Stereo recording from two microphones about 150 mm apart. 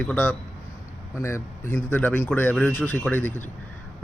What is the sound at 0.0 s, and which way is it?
Speech, 10° left (ahead or behind).